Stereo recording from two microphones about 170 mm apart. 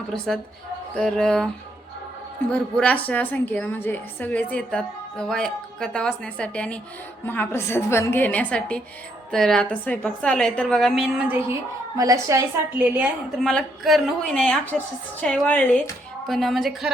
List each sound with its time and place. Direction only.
0.9 s a woman's voice: 5° left (ahead or behind)
2.5 s a woman's voice: 5° left (ahead or behind)
11.9 s a woman's voice: 20° right (ahead or behind)
13.4 s a woman's voice: 5° left (ahead or behind)